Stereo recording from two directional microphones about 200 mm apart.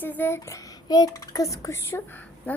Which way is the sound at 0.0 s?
10° left (ahead or behind).